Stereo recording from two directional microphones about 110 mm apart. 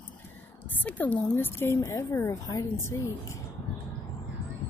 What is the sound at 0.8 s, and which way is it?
A woman's voice, 15° left (ahead or behind).